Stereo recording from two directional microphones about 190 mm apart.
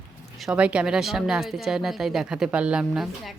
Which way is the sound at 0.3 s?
5° right (ahead or behind).